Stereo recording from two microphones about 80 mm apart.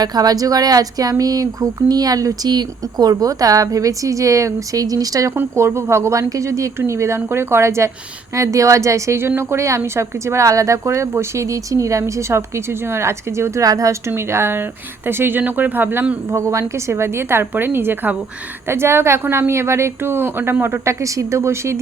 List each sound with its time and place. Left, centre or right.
0.0 s a woman's voice: right
5.3 s a woman's voice: right
14.1 s speech: right
16.3 s a woman's voice: right
21.0 s a woman's voice: right